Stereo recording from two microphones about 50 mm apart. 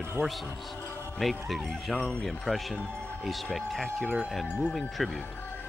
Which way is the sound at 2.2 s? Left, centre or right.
Centre.